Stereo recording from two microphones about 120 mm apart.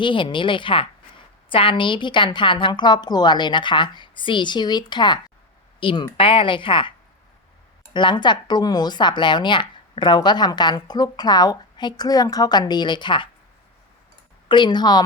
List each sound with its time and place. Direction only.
0.0 s speech: 45° left (ahead or behind)
7.9 s speech: 40° left (ahead or behind)
14.4 s speech: 40° left (ahead or behind)